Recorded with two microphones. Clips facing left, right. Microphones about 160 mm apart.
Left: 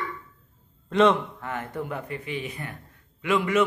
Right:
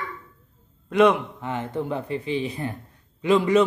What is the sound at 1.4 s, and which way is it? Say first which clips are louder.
A man's voice: right 4 dB; 25° right (ahead or behind).